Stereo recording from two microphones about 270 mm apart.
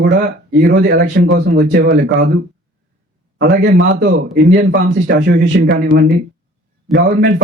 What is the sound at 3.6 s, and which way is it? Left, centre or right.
A man's voice, right.